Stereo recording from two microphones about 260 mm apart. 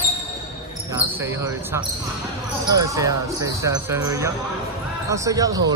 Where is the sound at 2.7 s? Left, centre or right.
Centre.